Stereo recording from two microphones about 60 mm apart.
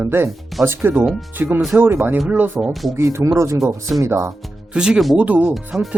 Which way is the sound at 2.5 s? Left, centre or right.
Centre.